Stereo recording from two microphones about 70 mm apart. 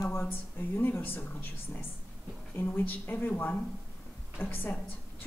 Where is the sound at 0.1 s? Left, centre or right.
Left.